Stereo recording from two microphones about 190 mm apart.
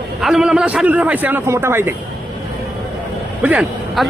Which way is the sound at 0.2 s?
Centre (ahead or behind).